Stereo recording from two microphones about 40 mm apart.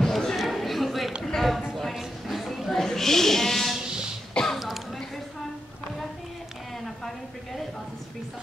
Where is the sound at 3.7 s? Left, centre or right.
Centre.